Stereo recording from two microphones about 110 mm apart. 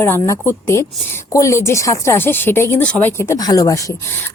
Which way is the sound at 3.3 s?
35° left (ahead or behind).